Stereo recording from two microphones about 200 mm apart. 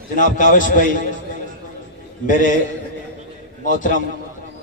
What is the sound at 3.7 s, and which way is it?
Speech, 40° left (ahead or behind).